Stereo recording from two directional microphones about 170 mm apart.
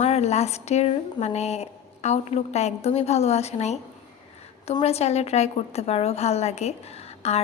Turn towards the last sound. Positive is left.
turn(degrees=35)  # may be behind; listen again after turning